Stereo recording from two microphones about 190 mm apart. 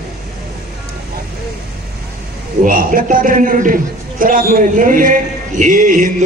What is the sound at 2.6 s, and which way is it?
A man's voice, 45° right (ahead or behind).